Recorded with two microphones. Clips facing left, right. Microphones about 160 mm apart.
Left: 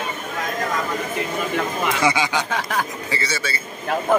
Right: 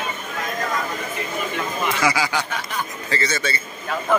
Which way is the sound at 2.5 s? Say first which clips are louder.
Left 4 dB; 90° left.